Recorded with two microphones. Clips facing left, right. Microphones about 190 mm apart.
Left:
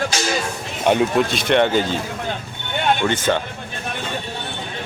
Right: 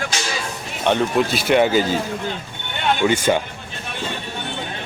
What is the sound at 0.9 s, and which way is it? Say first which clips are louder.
Speech: left 2 dB; 10° left (ahead or behind).